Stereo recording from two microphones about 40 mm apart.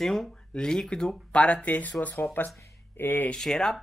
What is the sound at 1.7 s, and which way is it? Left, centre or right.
Speech, left.